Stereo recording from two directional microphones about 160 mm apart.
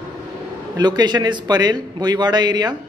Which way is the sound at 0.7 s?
25° right (ahead or behind).